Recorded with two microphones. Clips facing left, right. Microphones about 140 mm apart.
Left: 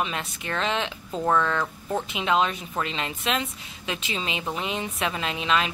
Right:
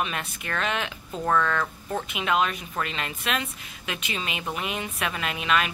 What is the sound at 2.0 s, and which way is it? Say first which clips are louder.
A woman's voice: left 1 dB; 25° left (ahead or behind).